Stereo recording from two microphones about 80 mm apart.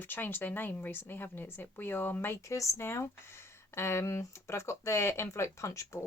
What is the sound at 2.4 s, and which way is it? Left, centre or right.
Speech, left.